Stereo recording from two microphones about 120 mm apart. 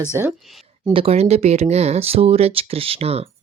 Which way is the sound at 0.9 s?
50° right (ahead or behind).